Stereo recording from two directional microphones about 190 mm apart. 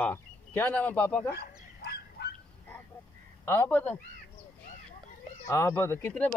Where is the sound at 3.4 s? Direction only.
10° left (ahead or behind).